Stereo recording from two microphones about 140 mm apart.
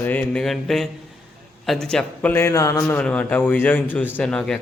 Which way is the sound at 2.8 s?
10° left (ahead or behind).